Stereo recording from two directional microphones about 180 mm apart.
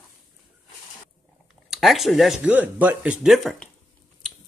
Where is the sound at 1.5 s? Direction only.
Centre (ahead or behind).